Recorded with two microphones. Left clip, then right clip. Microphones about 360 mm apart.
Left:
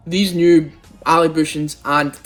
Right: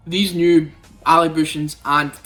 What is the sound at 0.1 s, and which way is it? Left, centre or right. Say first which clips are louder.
Speech: left 2 dB; centre.